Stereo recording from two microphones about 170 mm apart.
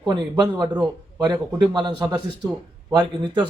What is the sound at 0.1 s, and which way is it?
A man's voice, 25° right (ahead or behind).